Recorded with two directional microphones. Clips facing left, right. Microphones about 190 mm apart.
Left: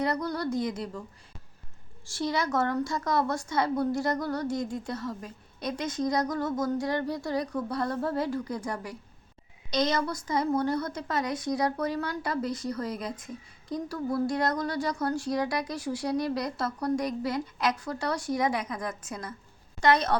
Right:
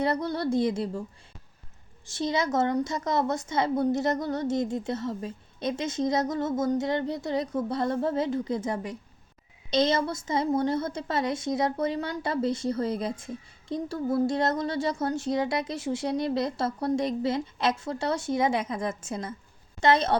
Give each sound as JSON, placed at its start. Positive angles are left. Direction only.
{"t": 0.0, "sound": "a woman's voice", "side_deg": -25}
{"t": 2.0, "sound": "a woman's voice", "side_deg": -20}